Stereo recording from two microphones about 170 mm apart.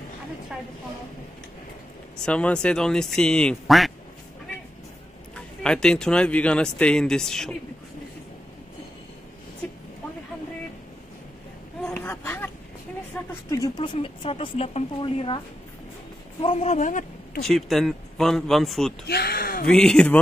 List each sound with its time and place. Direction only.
2.1 s speech: 5° left (ahead or behind)
5.3 s speech: 5° left (ahead or behind)
11.8 s a sound: 5° left (ahead or behind)
13.3 s speech: 20° left (ahead or behind); by 17.4 s 50° left (ahead or behind)
17.4 s speech: centre (ahead or behind)
19.0 s speech: 70° left (ahead or behind)
19.6 s speech: 5° left (ahead or behind)